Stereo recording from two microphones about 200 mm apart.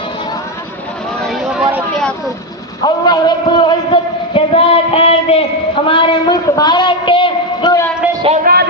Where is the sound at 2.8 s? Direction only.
20° left (ahead or behind).